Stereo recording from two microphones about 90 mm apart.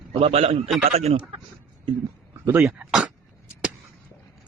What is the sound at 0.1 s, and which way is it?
Speech, 90° right.